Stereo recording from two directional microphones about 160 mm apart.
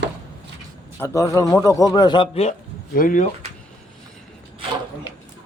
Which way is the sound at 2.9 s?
60° left (ahead or behind).